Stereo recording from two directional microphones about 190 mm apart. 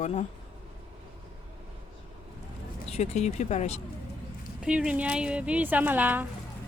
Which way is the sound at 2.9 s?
35° left (ahead or behind).